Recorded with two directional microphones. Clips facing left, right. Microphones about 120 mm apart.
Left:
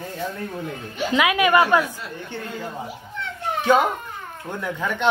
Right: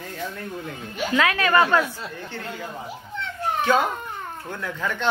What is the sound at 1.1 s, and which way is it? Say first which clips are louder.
Speech: left 2 dB; 15° left (ahead or behind).